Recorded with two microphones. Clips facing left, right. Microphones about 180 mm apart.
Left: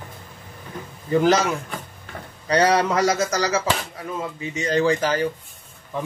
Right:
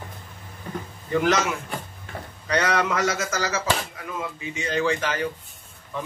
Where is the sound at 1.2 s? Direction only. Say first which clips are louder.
Left 4 dB; 35° left (ahead or behind).